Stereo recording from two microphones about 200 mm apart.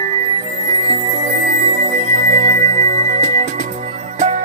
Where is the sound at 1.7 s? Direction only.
40° right (ahead or behind).